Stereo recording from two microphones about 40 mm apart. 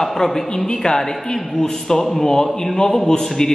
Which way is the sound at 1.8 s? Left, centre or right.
Centre.